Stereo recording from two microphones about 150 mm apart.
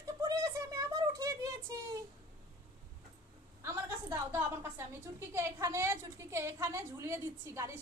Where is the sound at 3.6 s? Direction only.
20° right (ahead or behind).